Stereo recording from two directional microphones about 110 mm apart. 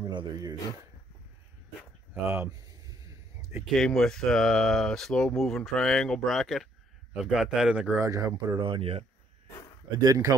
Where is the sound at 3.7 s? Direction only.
5° left (ahead or behind).